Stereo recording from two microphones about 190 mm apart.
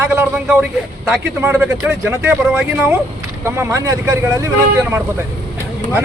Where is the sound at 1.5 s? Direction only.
10° right (ahead or behind).